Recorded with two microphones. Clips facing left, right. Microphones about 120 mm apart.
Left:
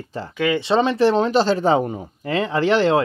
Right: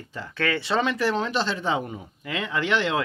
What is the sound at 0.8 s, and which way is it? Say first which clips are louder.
Speech: left 8 dB; 30° left (ahead or behind).